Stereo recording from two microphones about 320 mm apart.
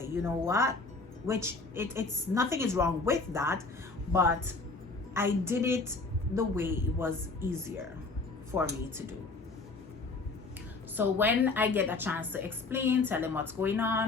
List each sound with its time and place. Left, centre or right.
0.0 s a woman's voice: centre
10.9 s a woman's voice: centre